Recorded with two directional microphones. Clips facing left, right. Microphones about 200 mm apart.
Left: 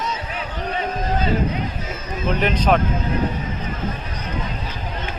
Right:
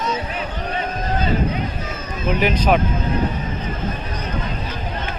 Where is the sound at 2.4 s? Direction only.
10° right (ahead or behind).